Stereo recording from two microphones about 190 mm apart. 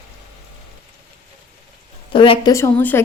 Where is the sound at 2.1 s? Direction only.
25° left (ahead or behind).